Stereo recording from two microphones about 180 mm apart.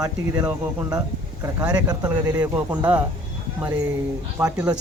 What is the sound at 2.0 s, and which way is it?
Speech, 20° right (ahead or behind).